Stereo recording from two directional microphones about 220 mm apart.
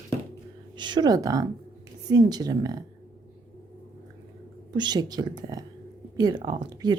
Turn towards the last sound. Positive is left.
turn(degrees=-20)  # may be behind; listen again after turning